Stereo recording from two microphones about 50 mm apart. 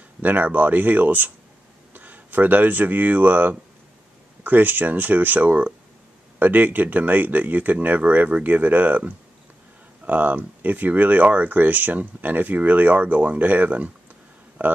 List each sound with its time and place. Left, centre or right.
0.2 s speech: right